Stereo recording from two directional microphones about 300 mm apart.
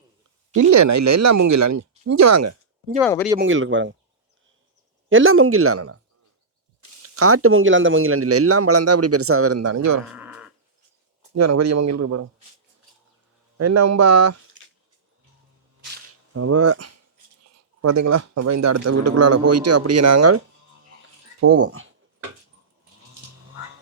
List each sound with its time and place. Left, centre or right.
0.5 s a man's voice: right
3.0 s speech: centre
3.3 s speech: right
5.0 s speech: right
7.0 s speech: right
10.1 s a sound: centre
11.3 s a man's voice: right
13.6 s a man's voice: right
16.3 s speech: right
17.8 s a man's voice: right
21.4 s speech: right